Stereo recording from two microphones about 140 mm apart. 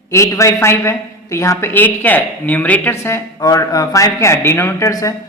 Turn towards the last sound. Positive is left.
turn(degrees=20)  # may be behind; listen again after turning